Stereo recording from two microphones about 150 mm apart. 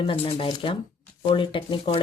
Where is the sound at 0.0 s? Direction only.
40° left (ahead or behind).